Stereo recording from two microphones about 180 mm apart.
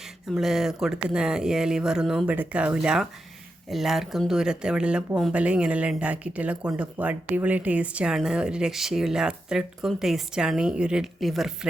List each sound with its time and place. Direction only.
0.3 s speech: centre (ahead or behind)